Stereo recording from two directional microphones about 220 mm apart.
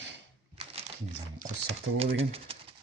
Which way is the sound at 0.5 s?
25° right (ahead or behind).